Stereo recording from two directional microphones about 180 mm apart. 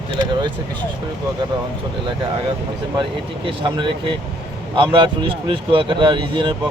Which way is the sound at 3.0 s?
30° right (ahead or behind).